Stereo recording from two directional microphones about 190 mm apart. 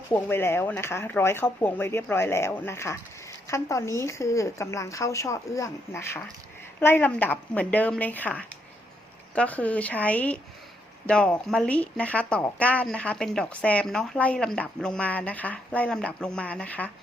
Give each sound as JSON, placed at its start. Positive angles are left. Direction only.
{"t": 0.1, "sound": "speech", "side_deg": 10}